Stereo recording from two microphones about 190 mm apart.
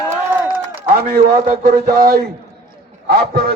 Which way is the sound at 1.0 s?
45° right (ahead or behind).